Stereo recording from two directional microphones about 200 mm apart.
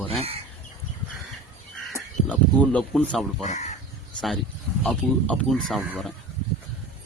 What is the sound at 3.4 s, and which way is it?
Speech, 35° left (ahead or behind).